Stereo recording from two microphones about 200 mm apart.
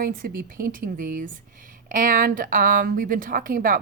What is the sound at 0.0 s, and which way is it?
A woman's voice, 45° right (ahead or behind).